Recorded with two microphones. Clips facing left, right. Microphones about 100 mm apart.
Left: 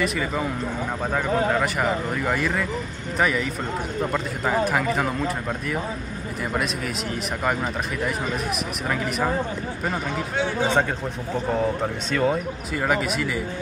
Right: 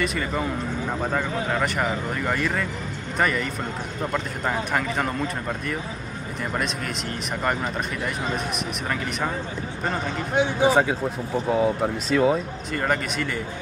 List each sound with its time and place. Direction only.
0.0 s speech: centre (ahead or behind)
7.4 s speech: centre (ahead or behind)
10.3 s speech: 20° right (ahead or behind)
10.7 s speech: 5° right (ahead or behind)